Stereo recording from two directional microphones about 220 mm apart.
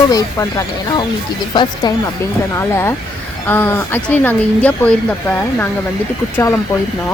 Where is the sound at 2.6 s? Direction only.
10° left (ahead or behind).